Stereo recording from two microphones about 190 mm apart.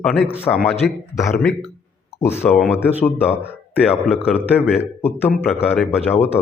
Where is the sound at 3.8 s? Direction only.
5° right (ahead or behind).